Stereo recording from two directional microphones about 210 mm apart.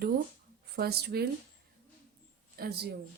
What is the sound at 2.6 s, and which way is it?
Speech, 50° right (ahead or behind).